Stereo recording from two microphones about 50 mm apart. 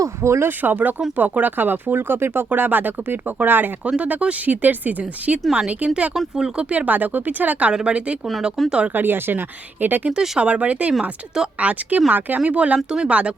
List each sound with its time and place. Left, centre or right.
0.2 s speech: right
0.6 s speech: right
2.5 s speech: right
3.8 s speech: right
6.1 s speech: centre
6.6 s speech: right
7.7 s speech: centre
8.6 s speech: centre
8.9 s speech: right
10.1 s speech: centre